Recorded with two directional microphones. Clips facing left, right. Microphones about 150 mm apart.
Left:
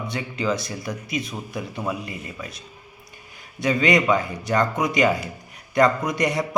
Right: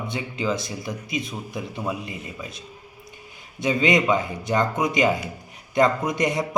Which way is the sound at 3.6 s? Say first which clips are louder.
Left 1 dB; 25° right (ahead or behind).